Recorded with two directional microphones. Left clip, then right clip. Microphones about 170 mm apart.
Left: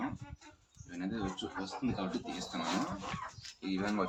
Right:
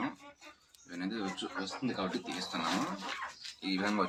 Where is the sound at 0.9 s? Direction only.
5° left (ahead or behind).